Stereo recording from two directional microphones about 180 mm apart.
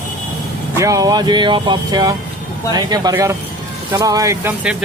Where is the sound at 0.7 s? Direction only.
15° right (ahead or behind).